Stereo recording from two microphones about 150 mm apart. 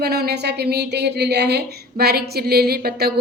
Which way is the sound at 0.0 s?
90° right.